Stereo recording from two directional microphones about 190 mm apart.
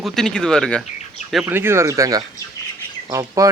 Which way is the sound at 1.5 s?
10° right (ahead or behind).